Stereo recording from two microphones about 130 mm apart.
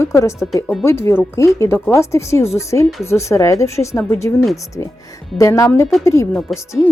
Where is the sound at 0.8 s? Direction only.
20° left (ahead or behind).